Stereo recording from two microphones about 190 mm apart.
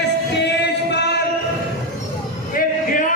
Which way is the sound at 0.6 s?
60° left (ahead or behind).